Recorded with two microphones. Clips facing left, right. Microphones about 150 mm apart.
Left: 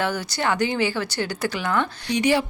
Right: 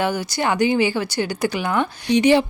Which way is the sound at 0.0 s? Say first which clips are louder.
Right 3 dB; 15° right (ahead or behind).